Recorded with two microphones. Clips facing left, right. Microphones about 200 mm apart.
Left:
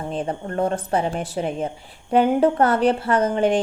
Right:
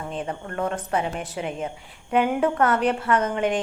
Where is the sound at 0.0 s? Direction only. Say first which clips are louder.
Left 4 dB; 35° left (ahead or behind).